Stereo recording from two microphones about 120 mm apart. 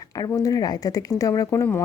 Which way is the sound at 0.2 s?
30° left (ahead or behind).